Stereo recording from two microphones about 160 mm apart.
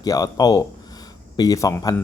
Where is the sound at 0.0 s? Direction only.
25° left (ahead or behind).